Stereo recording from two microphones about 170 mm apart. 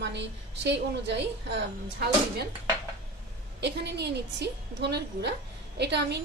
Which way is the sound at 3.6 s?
85° right.